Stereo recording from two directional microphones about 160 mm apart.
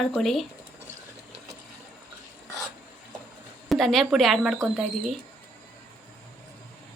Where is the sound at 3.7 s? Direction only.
Centre (ahead or behind).